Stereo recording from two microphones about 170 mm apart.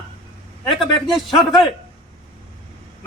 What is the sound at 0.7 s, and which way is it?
Speech, 30° left (ahead or behind).